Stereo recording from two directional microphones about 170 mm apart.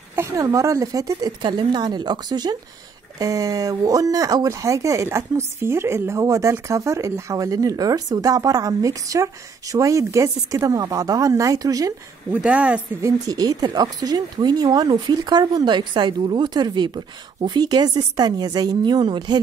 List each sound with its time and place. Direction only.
0.1 s speech: 20° right (ahead or behind)
12.4 s speech: 5° right (ahead or behind)
13.3 s speech: 20° right (ahead or behind)